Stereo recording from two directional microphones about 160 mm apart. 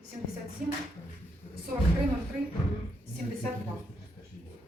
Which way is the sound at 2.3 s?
45° right (ahead or behind).